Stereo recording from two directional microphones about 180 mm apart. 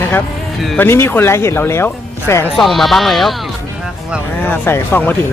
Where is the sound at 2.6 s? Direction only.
Centre (ahead or behind).